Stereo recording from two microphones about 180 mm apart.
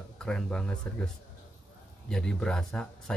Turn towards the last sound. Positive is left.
turn(degrees=5)  # may be behind; listen again after turning